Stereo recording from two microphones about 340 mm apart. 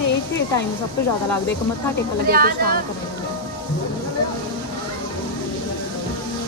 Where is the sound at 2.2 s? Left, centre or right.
Right.